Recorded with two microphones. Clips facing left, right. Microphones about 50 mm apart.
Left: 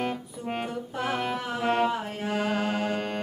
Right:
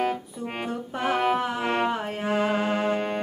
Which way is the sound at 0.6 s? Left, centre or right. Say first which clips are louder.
Right 6 dB; right.